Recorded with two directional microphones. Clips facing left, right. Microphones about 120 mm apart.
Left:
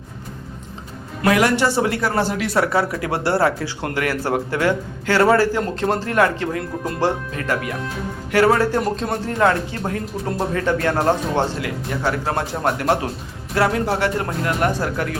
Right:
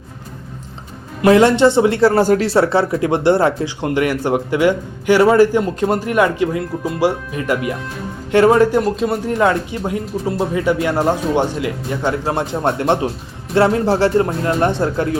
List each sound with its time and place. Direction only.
1.2 s speech: 25° right (ahead or behind)
2.1 s speech: 45° right (ahead or behind)
2.5 s speech: 30° right (ahead or behind)
6.8 s speech: 5° right (ahead or behind)
7.3 s speech: 15° right (ahead or behind)
8.8 s speech: 5° right (ahead or behind)
9.2 s speech: 15° right (ahead or behind)